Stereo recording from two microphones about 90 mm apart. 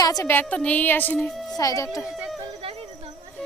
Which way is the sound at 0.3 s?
20° left (ahead or behind).